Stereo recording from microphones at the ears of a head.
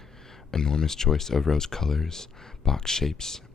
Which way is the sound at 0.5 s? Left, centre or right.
Left.